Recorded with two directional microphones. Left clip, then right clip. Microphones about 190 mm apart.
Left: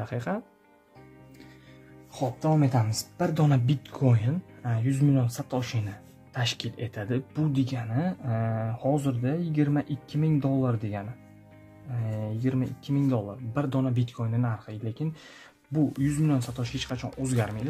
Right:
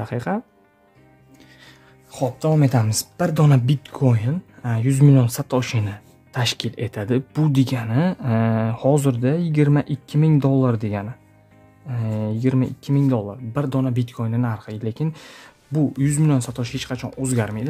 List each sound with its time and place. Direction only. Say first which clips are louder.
0.0 s speech: right 7 dB; 30° right (ahead or behind)
2.1 s speech: right 6 dB; 60° right (ahead or behind)
3.3 s speech: right 7 dB; 35° right (ahead or behind)
3.6 s speech: right 6 dB; 20° right (ahead or behind)